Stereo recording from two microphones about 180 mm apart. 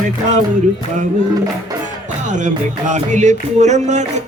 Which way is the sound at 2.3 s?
45° right (ahead or behind).